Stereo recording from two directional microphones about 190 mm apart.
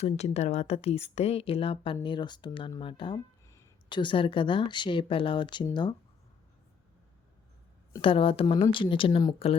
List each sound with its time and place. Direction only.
0.0 s a woman's voice: 35° left (ahead or behind)
8.0 s a woman's voice: 30° left (ahead or behind)